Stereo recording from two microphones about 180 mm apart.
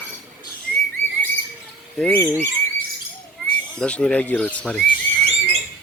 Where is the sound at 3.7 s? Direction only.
5° left (ahead or behind).